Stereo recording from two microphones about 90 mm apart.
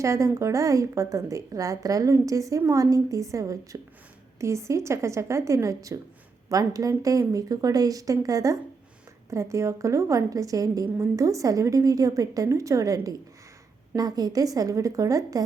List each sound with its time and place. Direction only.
0.0 s a woman's voice: 35° right (ahead or behind)
10.8 s a woman's voice: 25° right (ahead or behind)